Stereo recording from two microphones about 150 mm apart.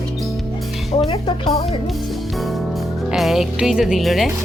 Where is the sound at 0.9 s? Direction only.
35° left (ahead or behind).